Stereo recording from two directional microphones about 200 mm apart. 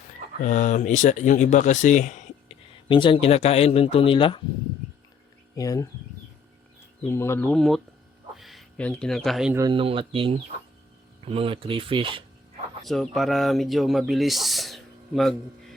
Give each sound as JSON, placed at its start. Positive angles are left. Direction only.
{"t": 0.4, "sound": "speech", "side_deg": 40}
{"t": 2.9, "sound": "speech", "side_deg": 25}
{"t": 5.5, "sound": "speech", "side_deg": 15}
{"t": 7.0, "sound": "speech", "side_deg": 10}
{"t": 9.6, "sound": "speech", "side_deg": -25}
{"t": 12.8, "sound": "speech", "side_deg": 0}